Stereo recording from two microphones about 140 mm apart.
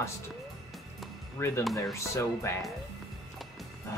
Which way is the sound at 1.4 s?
20° left (ahead or behind).